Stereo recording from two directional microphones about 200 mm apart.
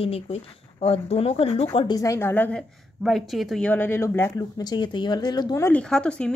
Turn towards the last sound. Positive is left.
turn(degrees=5)  # may be behind; listen again after turning